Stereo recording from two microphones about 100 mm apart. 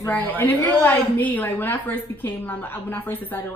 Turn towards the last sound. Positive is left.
turn(degrees=20)  # may be behind; listen again after turning